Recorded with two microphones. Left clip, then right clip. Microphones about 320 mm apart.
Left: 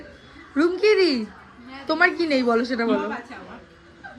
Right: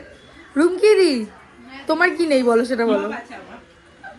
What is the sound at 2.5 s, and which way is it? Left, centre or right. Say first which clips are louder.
Speech: right 4 dB; right.